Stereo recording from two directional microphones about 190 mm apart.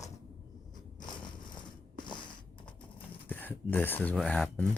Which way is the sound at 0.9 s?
25° left (ahead or behind).